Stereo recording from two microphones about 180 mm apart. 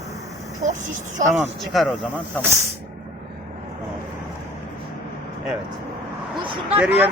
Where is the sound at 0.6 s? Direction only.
45° right (ahead or behind).